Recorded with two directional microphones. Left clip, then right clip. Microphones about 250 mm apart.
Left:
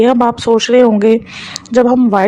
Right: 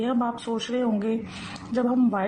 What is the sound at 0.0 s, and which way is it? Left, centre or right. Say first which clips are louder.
A woman's voice: left 16 dB; left.